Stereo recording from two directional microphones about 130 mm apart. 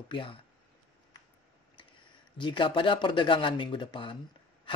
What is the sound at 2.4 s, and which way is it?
Speech, 40° left (ahead or behind).